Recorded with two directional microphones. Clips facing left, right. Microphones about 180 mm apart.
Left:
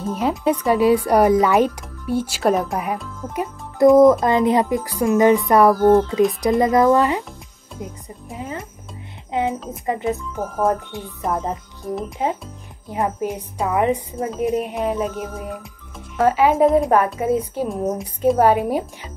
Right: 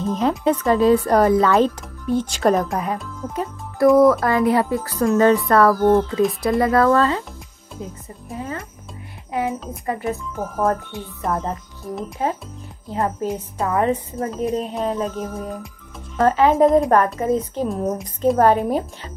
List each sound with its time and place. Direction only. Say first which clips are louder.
0.0 s speech: right 1 dB; 10° left (ahead or behind)
3.3 s speech: left 2 dB; 20° left (ahead or behind)
5.8 s speech: left 2 dB; centre (ahead or behind)
6.6 s a woman's voice: left 1 dB; 15° left (ahead or behind)
10.1 s speech: left 1 dB; centre (ahead or behind)
12.2 s speech: right 3 dB; 15° left (ahead or behind)
14.3 s speech: left 2 dB; centre (ahead or behind)
14.6 s speech: left 1 dB; 15° left (ahead or behind)
18.4 s speech: right 1 dB; 10° left (ahead or behind)